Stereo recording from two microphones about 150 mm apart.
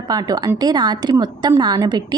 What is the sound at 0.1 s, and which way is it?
A woman's voice, 25° right (ahead or behind).